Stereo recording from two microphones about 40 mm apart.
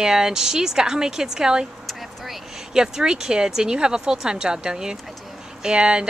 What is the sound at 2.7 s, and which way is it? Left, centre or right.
Speech, centre.